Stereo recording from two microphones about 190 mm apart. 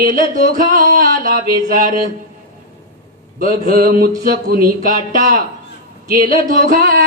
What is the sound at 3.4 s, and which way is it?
Speech, 45° right (ahead or behind).